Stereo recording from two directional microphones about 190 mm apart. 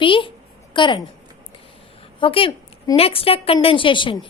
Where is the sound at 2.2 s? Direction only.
25° left (ahead or behind).